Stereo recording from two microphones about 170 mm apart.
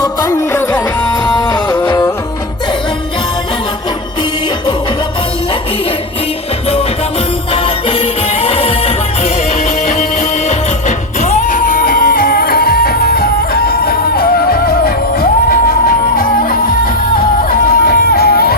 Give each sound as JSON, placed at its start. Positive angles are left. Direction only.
{"t": 0.0, "sound": "music", "side_deg": 15}
{"t": 1.3, "sound": "music", "side_deg": 25}
{"t": 7.5, "sound": "music", "side_deg": 35}
{"t": 10.5, "sound": "music", "side_deg": 45}